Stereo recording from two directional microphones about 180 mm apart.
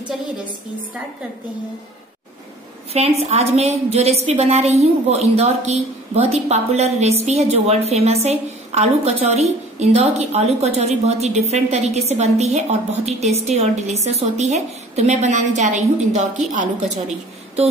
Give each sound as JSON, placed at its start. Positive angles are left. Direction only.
{"t": 2.9, "sound": "a woman's voice", "side_deg": -35}